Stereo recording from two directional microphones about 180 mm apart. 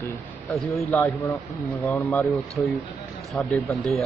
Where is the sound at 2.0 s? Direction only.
Centre (ahead or behind).